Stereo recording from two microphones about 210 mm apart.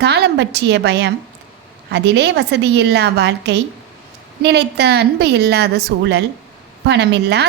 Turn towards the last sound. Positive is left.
turn(degrees=-55)  # may be behind; listen again after turning